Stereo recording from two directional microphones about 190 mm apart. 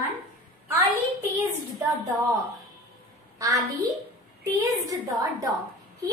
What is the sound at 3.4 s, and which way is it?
Speech, 20° right (ahead or behind).